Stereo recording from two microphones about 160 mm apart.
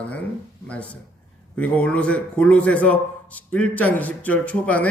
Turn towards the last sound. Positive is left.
turn(degrees=10)  # may be behind; listen again after turning